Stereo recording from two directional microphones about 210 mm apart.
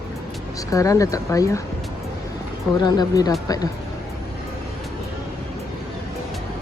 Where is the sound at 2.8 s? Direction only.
20° left (ahead or behind).